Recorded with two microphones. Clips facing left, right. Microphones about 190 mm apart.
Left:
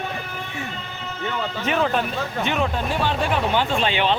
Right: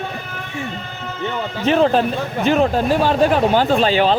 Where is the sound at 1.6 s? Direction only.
35° right (ahead or behind).